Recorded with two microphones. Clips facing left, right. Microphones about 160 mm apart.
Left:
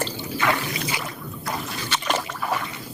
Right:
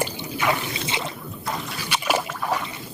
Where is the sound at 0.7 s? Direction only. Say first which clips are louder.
Even; 25° right (ahead or behind).